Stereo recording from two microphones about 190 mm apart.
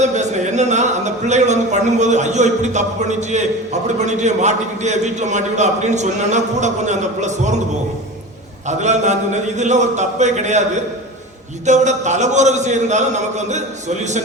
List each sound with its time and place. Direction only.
0.0 s speech: 40° right (ahead or behind)
8.6 s speech: 40° right (ahead or behind)
11.6 s speech: 40° right (ahead or behind)